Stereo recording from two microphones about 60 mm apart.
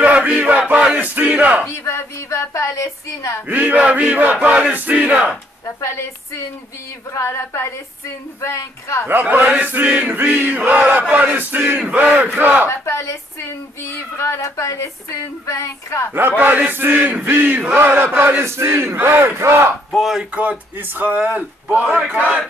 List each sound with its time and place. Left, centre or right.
0.0 s battle cry: right
1.7 s speech: left
3.4 s chant: right
5.8 s speech: left
9.0 s chant: right
11.2 s battle cry: right
11.8 s chant: right
12.4 s battle cry: right
12.6 s speech: left
14.1 s speech: left
16.1 s battle cry: right
18.4 s battle cry: right
20.0 s speech: centre
20.3 s chant: right